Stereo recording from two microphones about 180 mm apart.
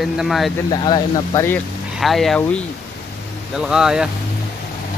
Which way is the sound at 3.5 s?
5° right (ahead or behind).